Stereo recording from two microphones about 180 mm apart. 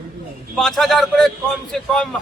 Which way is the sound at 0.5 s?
Centre (ahead or behind).